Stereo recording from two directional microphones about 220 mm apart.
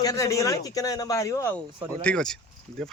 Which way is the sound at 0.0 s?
15° left (ahead or behind).